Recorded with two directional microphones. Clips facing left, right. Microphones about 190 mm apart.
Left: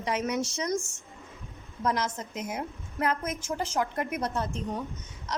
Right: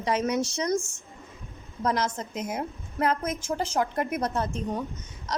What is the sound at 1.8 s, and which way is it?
A woman's voice, 35° right (ahead or behind).